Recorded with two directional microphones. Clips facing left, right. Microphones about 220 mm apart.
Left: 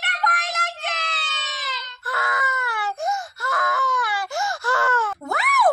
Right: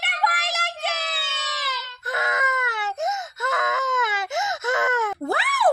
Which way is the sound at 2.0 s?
20° right (ahead or behind).